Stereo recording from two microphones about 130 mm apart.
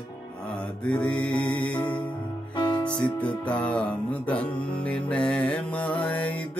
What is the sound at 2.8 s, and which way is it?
Music, 10° left (ahead or behind).